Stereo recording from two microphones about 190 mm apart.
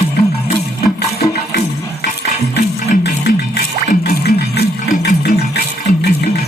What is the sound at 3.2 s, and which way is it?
Music, 55° left (ahead or behind).